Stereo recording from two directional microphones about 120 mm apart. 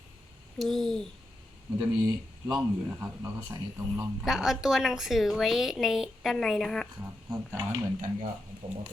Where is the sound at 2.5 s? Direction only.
15° right (ahead or behind).